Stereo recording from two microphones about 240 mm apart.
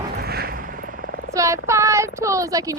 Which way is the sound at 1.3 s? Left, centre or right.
Centre.